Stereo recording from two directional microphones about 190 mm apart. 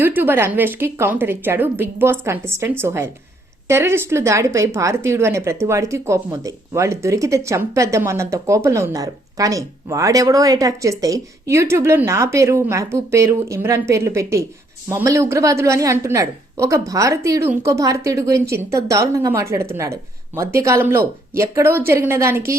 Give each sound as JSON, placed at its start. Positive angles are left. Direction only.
{"t": 0.0, "sound": "a woman's voice", "side_deg": -10}